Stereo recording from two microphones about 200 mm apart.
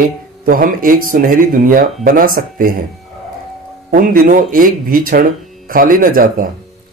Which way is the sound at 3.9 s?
40° right (ahead or behind).